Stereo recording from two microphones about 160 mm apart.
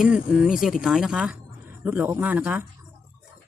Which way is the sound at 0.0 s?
5° right (ahead or behind).